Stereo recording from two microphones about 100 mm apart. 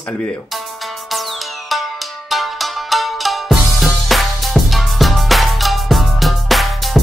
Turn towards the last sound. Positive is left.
turn(degrees=0)  # may be behind; listen again after turning